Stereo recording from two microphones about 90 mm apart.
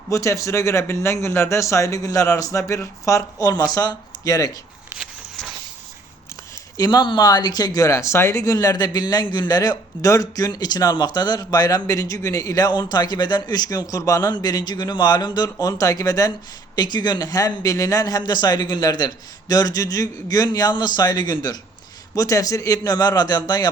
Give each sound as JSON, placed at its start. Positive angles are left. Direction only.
{"t": 0.1, "sound": "speech", "side_deg": 35}
{"t": 6.7, "sound": "speech", "side_deg": 45}
{"t": 16.7, "sound": "speech", "side_deg": 50}
{"t": 22.1, "sound": "speech", "side_deg": 40}